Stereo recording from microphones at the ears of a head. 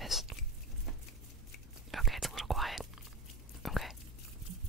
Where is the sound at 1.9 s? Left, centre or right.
Centre.